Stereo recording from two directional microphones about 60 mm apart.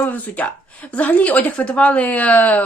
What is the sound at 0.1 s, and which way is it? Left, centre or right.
Speech, left.